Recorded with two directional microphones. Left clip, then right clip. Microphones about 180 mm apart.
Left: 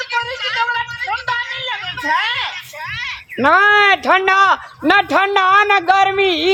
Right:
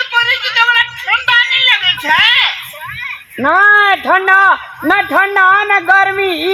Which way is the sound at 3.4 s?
25° left (ahead or behind).